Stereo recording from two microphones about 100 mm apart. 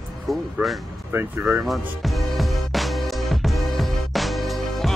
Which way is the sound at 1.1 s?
25° right (ahead or behind).